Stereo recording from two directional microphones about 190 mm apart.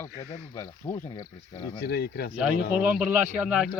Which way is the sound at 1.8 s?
55° left (ahead or behind).